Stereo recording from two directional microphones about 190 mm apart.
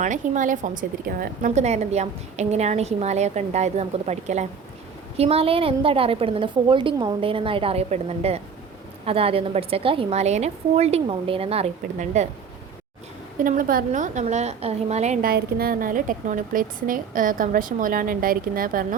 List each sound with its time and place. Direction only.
0.0 s a woman's voice: 40° right (ahead or behind)
13.4 s a woman's voice: 45° right (ahead or behind)
15.3 s a woman's voice: 50° right (ahead or behind)